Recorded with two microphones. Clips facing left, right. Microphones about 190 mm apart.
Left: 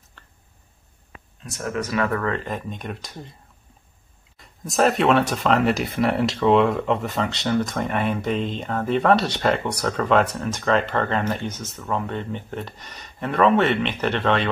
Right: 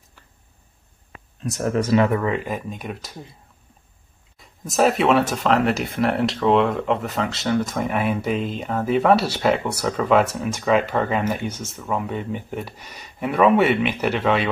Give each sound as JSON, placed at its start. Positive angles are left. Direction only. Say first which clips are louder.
{"t": 0.2, "sound": "a sound", "louder": "left 1 dB", "side_deg": -10}
{"t": 1.6, "sound": "speech", "louder": "right 6 dB", "side_deg": -30}
{"t": 4.4, "sound": "speech", "louder": "right 1 dB", "side_deg": -5}